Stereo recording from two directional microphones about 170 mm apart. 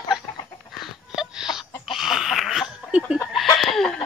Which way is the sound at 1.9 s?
Centre (ahead or behind).